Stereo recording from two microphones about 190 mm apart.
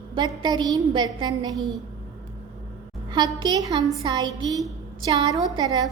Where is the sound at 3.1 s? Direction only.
20° right (ahead or behind).